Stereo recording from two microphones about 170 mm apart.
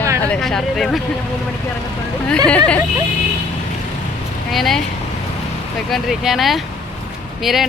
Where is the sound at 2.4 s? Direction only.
5° left (ahead or behind).